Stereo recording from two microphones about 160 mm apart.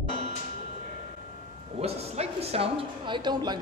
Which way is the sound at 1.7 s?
40° right (ahead or behind).